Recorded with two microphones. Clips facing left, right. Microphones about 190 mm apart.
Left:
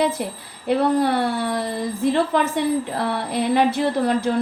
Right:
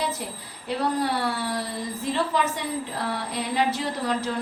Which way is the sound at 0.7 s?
55° left (ahead or behind).